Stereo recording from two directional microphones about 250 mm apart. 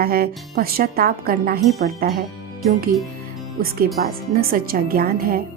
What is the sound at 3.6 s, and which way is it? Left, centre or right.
Speech, right.